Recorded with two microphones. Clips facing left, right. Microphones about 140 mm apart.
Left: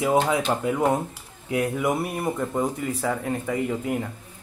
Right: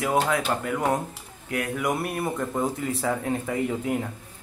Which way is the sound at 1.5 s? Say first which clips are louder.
Left 4 dB; 15° left (ahead or behind).